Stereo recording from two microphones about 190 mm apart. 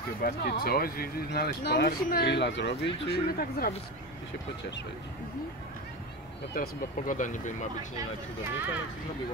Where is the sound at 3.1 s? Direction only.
50° left (ahead or behind).